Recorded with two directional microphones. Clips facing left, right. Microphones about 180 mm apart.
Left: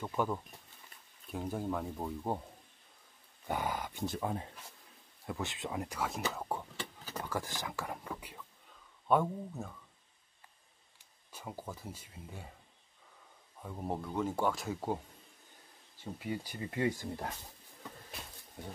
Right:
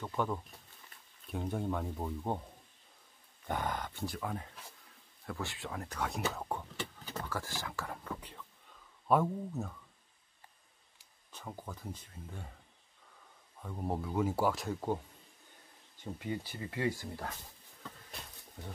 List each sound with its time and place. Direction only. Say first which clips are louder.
0.0 s speech: left 1 dB; 10° left (ahead or behind)
3.4 s speech: left 1 dB; 10° left (ahead or behind)
4.0 s speech: left 3 dB; 25° left (ahead or behind)
5.9 s speech: even; centre (ahead or behind)
7.1 s speech: left 3 dB; 15° left (ahead or behind)
9.0 s speech: even; centre (ahead or behind)
11.3 s speech: left 1 dB; 10° left (ahead or behind)
13.6 s speech: right 1 dB; 5° left (ahead or behind)
16.0 s speech: even; 10° left (ahead or behind)